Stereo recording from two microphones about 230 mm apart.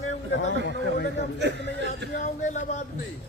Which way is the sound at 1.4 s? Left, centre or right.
Right.